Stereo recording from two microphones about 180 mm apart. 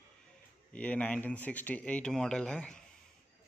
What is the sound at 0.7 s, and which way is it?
A man's voice, 10° left (ahead or behind).